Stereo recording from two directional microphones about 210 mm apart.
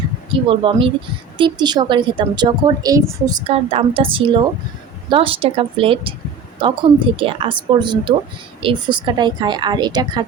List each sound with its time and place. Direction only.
0.4 s a woman's voice: 25° right (ahead or behind)